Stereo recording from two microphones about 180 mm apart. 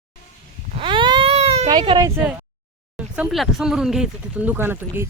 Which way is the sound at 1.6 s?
25° right (ahead or behind).